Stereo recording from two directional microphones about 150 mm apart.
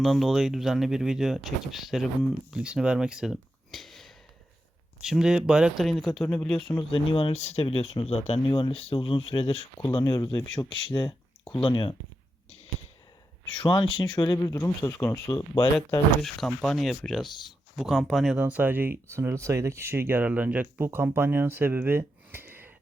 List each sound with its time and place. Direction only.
0.0 s speech: centre (ahead or behind)
6.9 s speech: 35° left (ahead or behind)
8.4 s speech: 35° left (ahead or behind)
10.0 s speech: 25° left (ahead or behind)
10.7 s speech: 35° left (ahead or behind)
13.6 s speech: 35° left (ahead or behind)
16.2 s speech: centre (ahead or behind)
18.3 s speech: 10° right (ahead or behind)